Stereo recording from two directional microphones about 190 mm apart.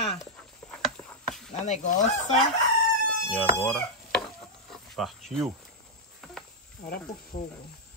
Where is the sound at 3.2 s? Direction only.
Centre (ahead or behind).